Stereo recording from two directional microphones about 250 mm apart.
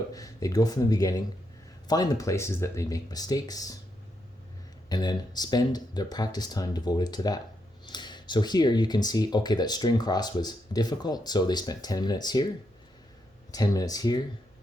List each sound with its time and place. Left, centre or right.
0.1 s speech: centre
4.9 s speech: centre
13.5 s speech: centre